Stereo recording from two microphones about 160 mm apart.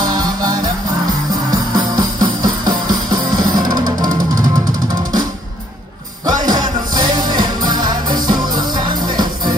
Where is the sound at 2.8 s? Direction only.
25° right (ahead or behind).